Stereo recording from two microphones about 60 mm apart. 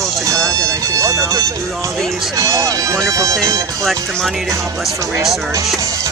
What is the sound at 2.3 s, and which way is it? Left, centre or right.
Speech, right.